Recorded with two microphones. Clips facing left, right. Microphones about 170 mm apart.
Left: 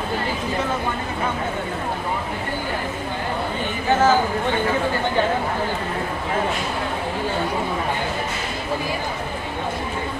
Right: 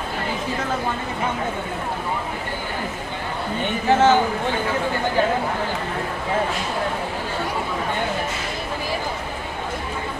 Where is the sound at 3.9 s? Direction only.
25° right (ahead or behind).